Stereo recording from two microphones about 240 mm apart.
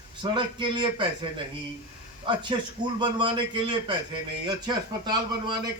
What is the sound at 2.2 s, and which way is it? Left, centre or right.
Speech, centre.